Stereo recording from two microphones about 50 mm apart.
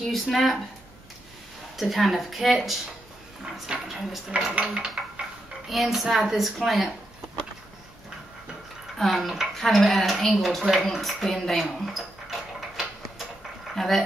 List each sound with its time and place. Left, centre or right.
0.0 s a woman's voice: centre
1.8 s a woman's voice: centre
3.7 s a sound: centre
5.7 s a woman's voice: centre
8.9 s dishes: centre
9.5 s a woman's voice: centre
11.4 s a sound: centre
13.7 s a woman's voice: centre